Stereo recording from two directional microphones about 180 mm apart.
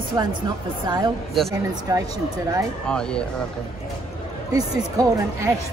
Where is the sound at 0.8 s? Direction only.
25° right (ahead or behind).